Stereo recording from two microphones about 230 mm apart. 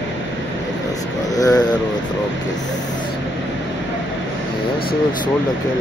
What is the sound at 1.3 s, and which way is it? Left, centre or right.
Speech, centre.